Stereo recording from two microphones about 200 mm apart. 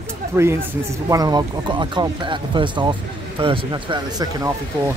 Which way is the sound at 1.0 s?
20° right (ahead or behind).